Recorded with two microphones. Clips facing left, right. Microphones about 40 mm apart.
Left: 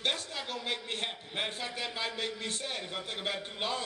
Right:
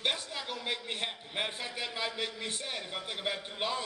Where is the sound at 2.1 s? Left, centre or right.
Centre.